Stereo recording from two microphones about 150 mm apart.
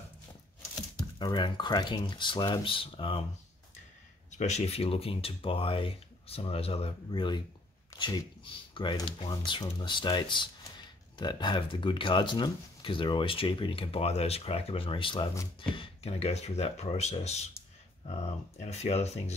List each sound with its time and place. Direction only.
0.9 s speech: 30° left (ahead or behind)
4.3 s speech: 50° left (ahead or behind)
7.1 s speech: 30° left (ahead or behind)